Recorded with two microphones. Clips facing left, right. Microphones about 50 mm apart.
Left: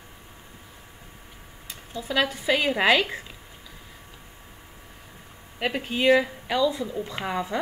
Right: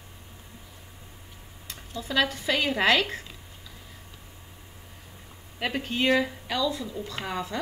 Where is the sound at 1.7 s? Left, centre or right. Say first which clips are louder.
Left 2 dB; centre.